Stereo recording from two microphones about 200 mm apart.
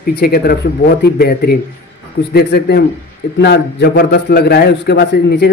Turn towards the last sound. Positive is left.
turn(degrees=55)  # may be behind; listen again after turning